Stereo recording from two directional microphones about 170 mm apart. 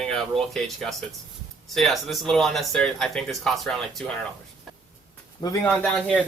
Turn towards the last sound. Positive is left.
turn(degrees=5)  # may be behind; listen again after turning